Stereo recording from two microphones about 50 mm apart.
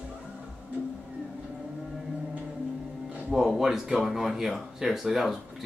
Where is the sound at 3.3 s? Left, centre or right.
Centre.